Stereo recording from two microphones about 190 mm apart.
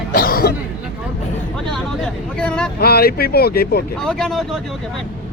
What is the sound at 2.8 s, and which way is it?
Speech, 55° left (ahead or behind).